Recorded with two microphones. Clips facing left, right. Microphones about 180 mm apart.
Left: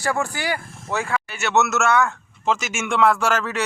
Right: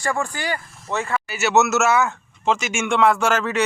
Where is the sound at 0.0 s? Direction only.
10° left (ahead or behind).